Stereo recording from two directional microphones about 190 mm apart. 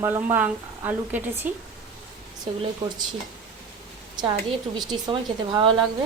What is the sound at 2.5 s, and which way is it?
Speech, 30° right (ahead or behind).